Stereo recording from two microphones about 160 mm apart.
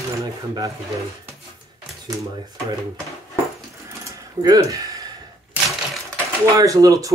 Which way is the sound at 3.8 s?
20° right (ahead or behind).